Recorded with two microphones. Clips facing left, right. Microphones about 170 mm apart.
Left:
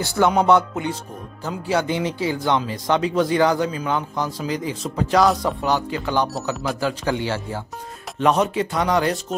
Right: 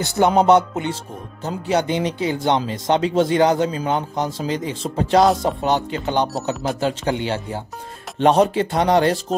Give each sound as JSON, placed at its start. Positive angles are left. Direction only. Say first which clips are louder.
{"t": 0.0, "sound": "speech", "louder": "right 2 dB", "side_deg": -20}
{"t": 8.2, "sound": "speech", "louder": "right 4 dB", "side_deg": -30}